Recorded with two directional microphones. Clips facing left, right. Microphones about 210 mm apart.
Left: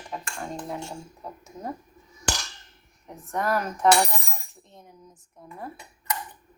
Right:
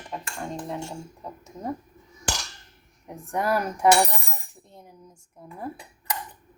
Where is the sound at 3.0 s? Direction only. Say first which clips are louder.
Right 1 dB; 15° right (ahead or behind).